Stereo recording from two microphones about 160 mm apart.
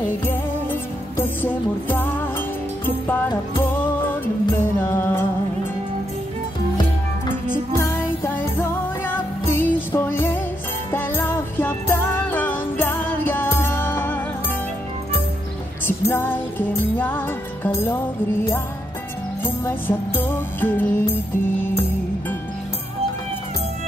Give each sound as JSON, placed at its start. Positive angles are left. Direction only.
{"t": 0.2, "sound": "music", "side_deg": 15}
{"t": 7.7, "sound": "music", "side_deg": 15}
{"t": 16.1, "sound": "music", "side_deg": 15}
{"t": 19.4, "sound": "music", "side_deg": 15}